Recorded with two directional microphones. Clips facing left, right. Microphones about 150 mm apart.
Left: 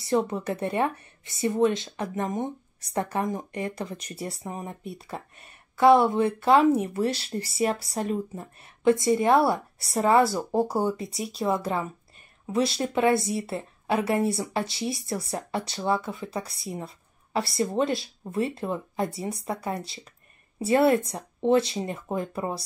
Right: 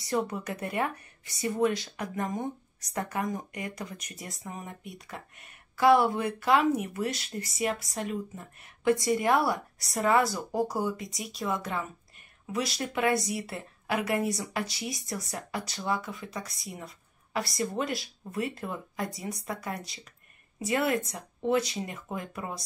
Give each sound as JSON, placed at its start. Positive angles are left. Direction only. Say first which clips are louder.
{"t": 0.0, "sound": "a woman's voice", "louder": "left 5 dB", "side_deg": 25}
{"t": 8.8, "sound": "a woman's voice", "louder": "left 4 dB", "side_deg": 25}